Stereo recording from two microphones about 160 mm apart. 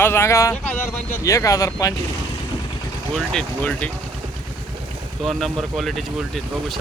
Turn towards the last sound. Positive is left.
turn(degrees=0)  # may be behind; listen again after turning